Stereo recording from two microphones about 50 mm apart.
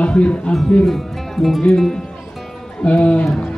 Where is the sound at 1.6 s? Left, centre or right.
Centre.